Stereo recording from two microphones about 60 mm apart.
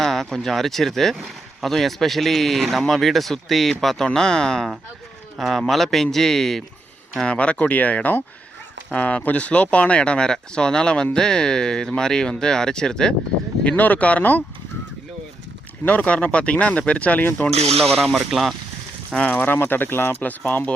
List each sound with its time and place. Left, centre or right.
0.0 s speech: centre
7.2 s speech: centre
13.7 s speech: left
16.0 s speech: centre
19.3 s speech: left
20.5 s speech: left